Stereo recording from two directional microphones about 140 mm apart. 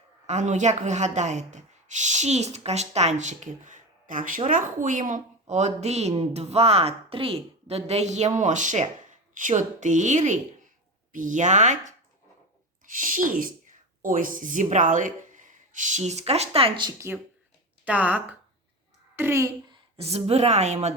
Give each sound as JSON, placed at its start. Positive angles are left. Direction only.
{"t": 0.3, "sound": "a woman's voice", "side_deg": -55}
{"t": 12.8, "sound": "speech", "side_deg": -75}
{"t": 17.8, "sound": "speech", "side_deg": -10}
{"t": 19.7, "sound": "a woman's voice", "side_deg": -45}